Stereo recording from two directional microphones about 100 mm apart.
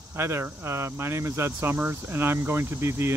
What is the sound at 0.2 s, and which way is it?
Speech, 25° right (ahead or behind).